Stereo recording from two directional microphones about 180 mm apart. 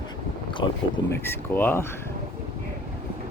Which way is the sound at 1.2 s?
10° left (ahead or behind).